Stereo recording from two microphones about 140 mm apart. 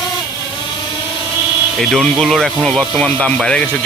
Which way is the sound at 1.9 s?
Centre (ahead or behind).